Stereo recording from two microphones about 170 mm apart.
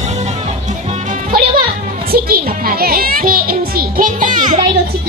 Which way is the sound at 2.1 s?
60° right (ahead or behind).